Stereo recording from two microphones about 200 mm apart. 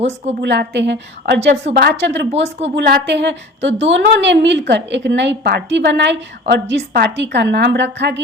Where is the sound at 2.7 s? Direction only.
60° right (ahead or behind).